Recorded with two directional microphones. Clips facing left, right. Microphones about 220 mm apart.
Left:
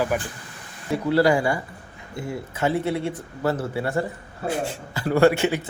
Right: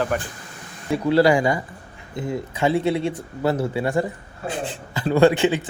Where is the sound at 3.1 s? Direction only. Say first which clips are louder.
Right 2 dB; 15° right (ahead or behind).